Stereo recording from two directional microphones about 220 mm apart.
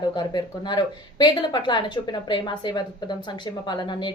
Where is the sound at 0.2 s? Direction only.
20° left (ahead or behind).